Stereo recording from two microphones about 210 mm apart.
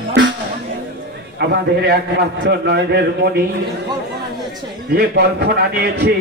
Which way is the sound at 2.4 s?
50° right (ahead or behind).